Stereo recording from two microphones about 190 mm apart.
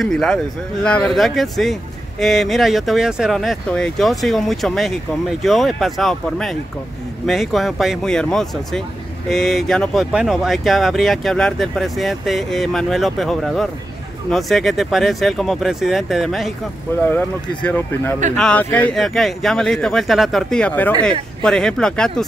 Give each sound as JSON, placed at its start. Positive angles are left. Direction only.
{"t": 0.0, "sound": "speech", "side_deg": 0}
{"t": 17.6, "sound": "speech", "side_deg": 10}